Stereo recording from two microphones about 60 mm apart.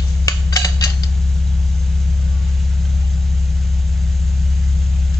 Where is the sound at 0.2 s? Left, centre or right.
Left.